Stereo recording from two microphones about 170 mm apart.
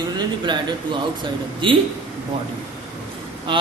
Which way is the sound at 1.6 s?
30° right (ahead or behind).